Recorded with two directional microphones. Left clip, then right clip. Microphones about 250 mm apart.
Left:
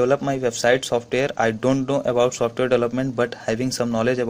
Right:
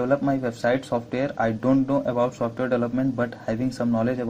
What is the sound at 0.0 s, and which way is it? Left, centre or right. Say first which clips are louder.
Speech: left 3 dB; left.